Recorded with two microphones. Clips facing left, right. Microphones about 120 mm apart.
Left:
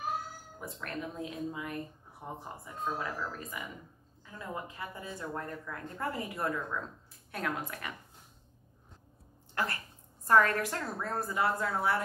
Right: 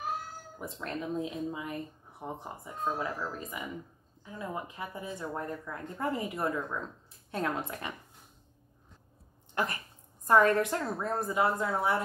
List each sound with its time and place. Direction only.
0.6 s speech: 20° right (ahead or behind)
9.6 s speech: 20° right (ahead or behind)